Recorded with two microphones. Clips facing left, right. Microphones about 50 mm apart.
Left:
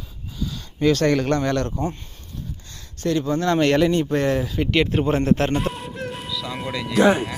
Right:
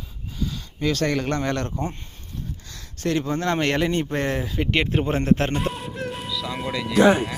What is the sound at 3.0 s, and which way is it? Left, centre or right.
Speech, right.